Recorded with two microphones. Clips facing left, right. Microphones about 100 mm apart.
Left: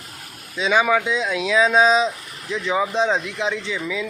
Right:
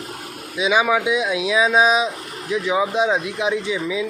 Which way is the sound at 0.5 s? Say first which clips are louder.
Even; 10° right (ahead or behind).